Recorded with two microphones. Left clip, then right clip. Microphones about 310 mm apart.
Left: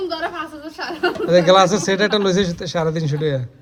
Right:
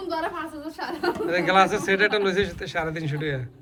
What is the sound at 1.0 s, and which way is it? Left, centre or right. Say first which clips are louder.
A man's voice: left 9 dB; centre.